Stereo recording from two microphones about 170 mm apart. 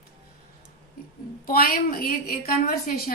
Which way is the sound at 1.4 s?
60° left (ahead or behind).